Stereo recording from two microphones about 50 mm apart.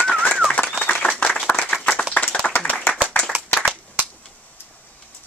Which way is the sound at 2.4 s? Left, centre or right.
Centre.